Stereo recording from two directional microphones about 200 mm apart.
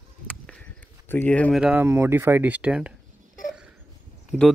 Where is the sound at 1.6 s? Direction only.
10° right (ahead or behind).